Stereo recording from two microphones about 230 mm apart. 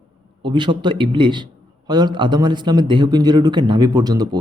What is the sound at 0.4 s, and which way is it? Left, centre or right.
A man's voice, right.